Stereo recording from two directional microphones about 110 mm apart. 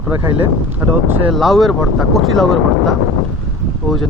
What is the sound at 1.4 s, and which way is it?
Speech, centre (ahead or behind).